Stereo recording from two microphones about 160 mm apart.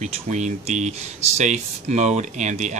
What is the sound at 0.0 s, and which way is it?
Speech, 45° right (ahead or behind).